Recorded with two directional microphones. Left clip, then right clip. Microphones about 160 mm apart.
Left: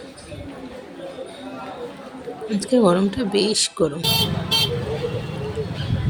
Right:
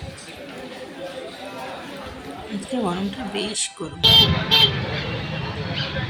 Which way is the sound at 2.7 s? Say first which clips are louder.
Left 9 dB; 30° left (ahead or behind).